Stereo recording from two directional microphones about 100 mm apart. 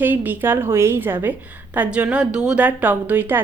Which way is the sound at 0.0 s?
20° right (ahead or behind).